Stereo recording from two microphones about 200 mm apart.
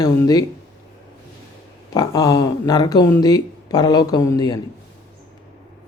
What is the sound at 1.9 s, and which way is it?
Speech, 20° left (ahead or behind).